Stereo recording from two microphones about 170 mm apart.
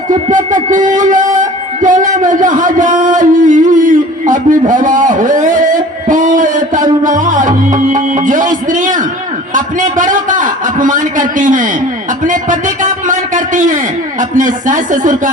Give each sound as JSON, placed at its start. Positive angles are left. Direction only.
{"t": 0.1, "sound": "music", "side_deg": -50}
{"t": 9.6, "sound": "a sound", "side_deg": -50}
{"t": 12.2, "sound": "a man's voice", "side_deg": -50}